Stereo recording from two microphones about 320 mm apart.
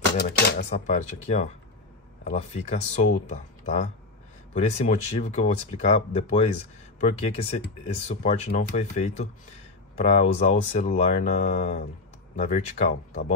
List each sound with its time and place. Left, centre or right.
0.2 s speech: left